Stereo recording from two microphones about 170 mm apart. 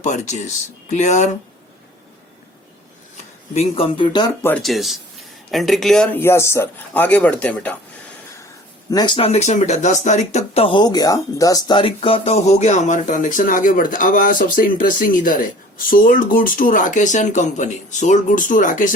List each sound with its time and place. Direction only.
0.0 s speech: 45° left (ahead or behind)
3.5 s speech: 35° left (ahead or behind)
4.4 s speech: 5° left (ahead or behind)
8.9 s speech: 25° left (ahead or behind); by 18.9 s 55° left (ahead or behind)